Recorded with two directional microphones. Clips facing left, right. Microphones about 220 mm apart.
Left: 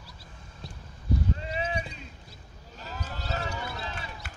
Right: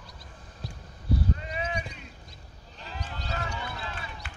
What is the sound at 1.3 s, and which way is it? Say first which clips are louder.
Clip-clop: left 2 dB; 30° left (ahead or behind).